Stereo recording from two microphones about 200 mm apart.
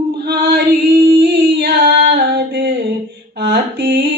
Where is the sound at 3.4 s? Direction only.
55° right (ahead or behind).